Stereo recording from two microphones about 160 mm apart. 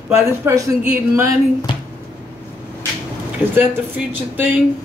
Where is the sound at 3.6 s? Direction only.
10° right (ahead or behind).